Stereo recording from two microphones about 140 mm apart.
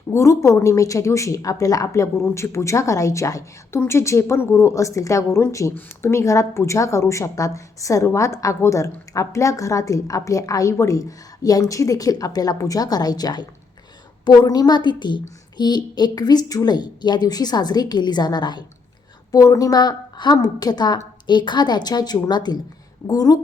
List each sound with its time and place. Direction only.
0.1 s a woman's voice: 20° left (ahead or behind)